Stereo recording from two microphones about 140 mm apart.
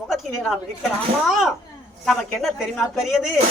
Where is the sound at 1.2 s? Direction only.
Centre (ahead or behind).